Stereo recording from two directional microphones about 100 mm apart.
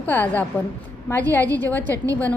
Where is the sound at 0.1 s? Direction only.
15° left (ahead or behind).